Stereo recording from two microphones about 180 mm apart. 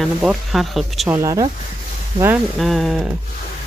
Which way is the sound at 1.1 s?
15° right (ahead or behind).